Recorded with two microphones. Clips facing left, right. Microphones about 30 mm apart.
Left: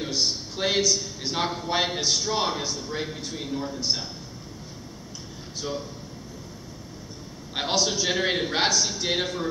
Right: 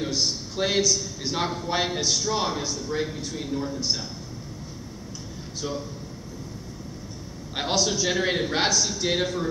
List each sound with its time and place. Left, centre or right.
0.0 s a man's voice: centre
5.6 s a man's voice: centre
7.5 s a man's voice: centre